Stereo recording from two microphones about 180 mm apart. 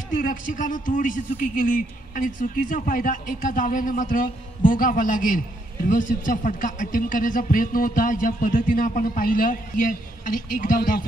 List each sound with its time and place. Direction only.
0.1 s speech: 50° left (ahead or behind)